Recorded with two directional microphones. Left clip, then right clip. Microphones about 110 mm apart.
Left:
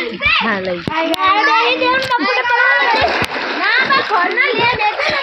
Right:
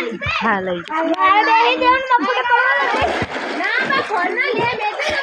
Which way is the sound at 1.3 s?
40° left (ahead or behind).